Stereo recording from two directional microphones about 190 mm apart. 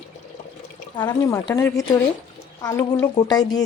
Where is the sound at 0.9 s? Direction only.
20° left (ahead or behind).